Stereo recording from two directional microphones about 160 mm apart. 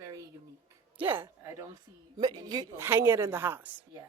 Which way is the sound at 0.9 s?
15° right (ahead or behind).